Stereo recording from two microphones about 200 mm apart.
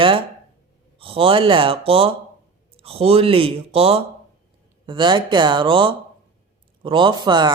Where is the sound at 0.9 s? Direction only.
25° right (ahead or behind).